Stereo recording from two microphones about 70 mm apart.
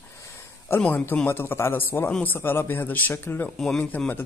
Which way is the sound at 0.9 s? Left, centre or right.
Left.